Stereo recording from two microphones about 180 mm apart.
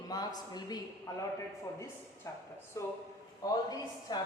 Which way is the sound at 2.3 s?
15° left (ahead or behind).